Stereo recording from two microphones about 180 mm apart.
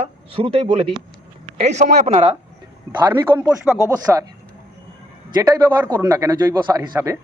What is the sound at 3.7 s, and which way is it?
Speech, 15° right (ahead or behind).